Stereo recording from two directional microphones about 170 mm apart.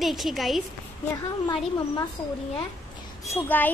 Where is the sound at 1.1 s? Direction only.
25° left (ahead or behind).